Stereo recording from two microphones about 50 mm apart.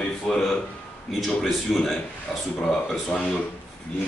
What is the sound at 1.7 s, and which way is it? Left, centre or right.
A man's voice, centre.